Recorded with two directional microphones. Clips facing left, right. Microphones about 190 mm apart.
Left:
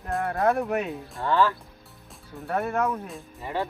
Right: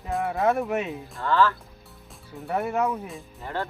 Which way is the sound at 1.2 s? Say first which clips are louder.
Right 1 dB; 15° left (ahead or behind).